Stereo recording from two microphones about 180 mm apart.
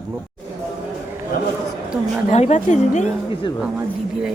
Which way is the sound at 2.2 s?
40° left (ahead or behind).